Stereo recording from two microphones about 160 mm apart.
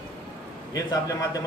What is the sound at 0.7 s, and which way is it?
Speech, 20° left (ahead or behind).